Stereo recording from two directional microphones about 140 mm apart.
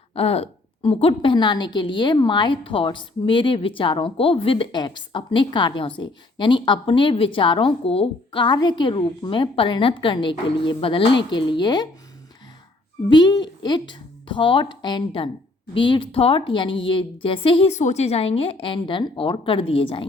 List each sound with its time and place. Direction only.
0.1 s a woman's voice: 45° left (ahead or behind)
13.1 s a woman's voice: 30° left (ahead or behind)
17.7 s a woman's voice: 55° left (ahead or behind); by 20.1 s 40° left (ahead or behind)